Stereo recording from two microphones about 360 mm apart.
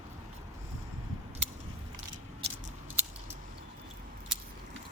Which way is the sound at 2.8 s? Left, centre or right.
Centre.